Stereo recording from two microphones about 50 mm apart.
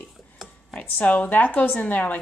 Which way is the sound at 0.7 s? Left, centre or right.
Left.